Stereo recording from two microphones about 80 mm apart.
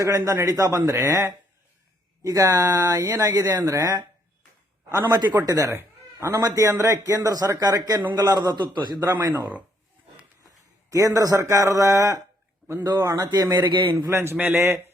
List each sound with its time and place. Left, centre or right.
0.0 s a man's voice: right
5.0 s a man's voice: right
5.5 s speech: right
5.7 s a man's voice: right
9.3 s a man's voice: right
10.9 s a man's voice: right
13.7 s a man's voice: right
14.1 s a man's voice: right